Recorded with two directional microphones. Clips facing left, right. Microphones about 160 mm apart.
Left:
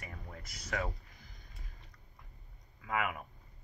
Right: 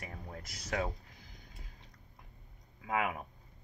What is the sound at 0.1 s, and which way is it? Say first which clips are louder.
Speech: right 3 dB; 35° right (ahead or behind).